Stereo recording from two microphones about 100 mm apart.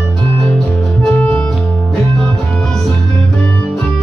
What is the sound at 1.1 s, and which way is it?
Music, 15° left (ahead or behind).